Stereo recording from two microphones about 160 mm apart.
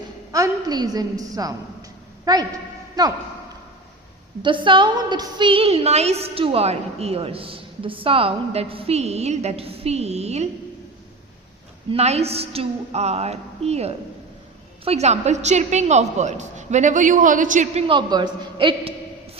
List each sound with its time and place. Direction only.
0.3 s a woman's voice: 20° right (ahead or behind)
4.4 s a woman's voice: 30° right (ahead or behind)
11.9 s a woman's voice: 40° right (ahead or behind)
17.8 s a woman's voice: 30° right (ahead or behind)